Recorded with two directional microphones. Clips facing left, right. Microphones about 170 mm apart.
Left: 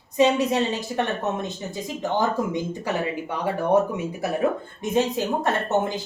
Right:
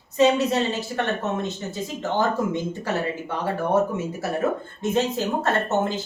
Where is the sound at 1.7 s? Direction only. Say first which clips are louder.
Even; 15° left (ahead or behind).